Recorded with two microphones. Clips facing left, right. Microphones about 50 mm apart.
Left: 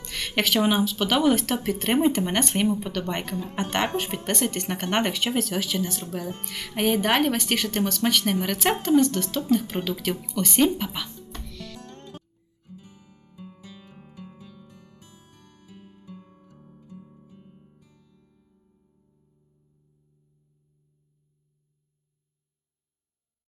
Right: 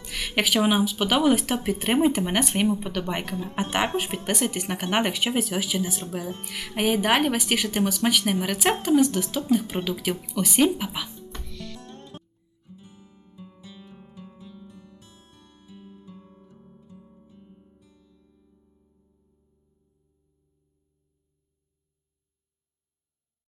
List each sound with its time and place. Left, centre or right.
0.0 s speech: centre
3.3 s speech: centre
3.6 s speech: centre
11.3 s music: centre
13.0 s music: right
14.2 s music: left
18.3 s music: centre